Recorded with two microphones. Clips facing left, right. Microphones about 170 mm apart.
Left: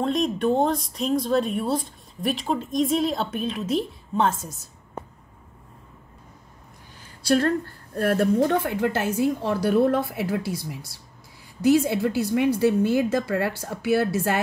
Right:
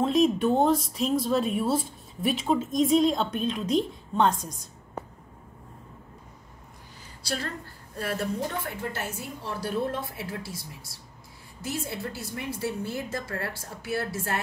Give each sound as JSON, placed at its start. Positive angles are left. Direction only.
{"t": 0.0, "sound": "speech", "side_deg": 0}
{"t": 7.2, "sound": "a woman's voice", "side_deg": 60}
{"t": 9.4, "sound": "a woman's voice", "side_deg": 70}